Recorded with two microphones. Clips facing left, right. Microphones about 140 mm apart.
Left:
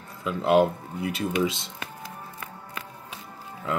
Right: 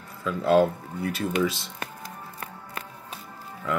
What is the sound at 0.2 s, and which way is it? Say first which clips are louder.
Speech: even; 20° left (ahead or behind).